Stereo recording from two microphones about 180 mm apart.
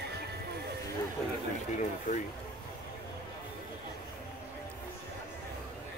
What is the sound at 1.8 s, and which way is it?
Speech, 45° left (ahead or behind).